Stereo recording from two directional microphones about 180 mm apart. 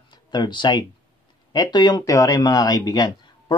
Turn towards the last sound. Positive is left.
turn(degrees=25)  # may be behind; listen again after turning